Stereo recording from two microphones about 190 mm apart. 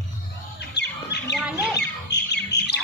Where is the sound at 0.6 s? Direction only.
65° left (ahead or behind).